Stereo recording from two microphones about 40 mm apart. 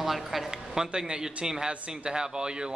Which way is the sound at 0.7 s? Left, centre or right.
Centre.